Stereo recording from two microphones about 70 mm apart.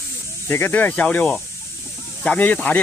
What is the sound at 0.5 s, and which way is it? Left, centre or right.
Speech, left.